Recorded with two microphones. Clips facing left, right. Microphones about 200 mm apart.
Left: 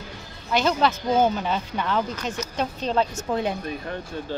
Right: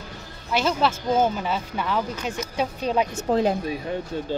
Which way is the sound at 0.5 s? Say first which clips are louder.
Left 1 dB; 5° right (ahead or behind).